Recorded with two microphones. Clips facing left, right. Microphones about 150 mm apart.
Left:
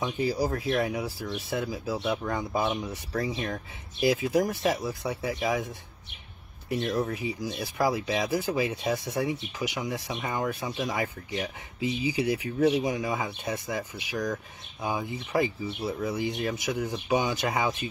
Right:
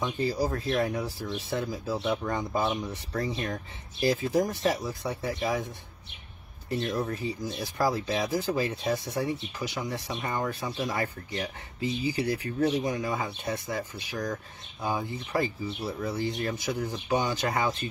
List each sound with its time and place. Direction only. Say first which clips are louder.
0.0 s speech: left 1 dB; 10° left (ahead or behind)
7.0 s speech: left 1 dB; 10° left (ahead or behind)